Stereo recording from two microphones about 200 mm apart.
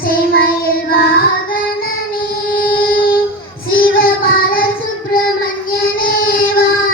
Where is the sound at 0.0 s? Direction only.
45° left (ahead or behind).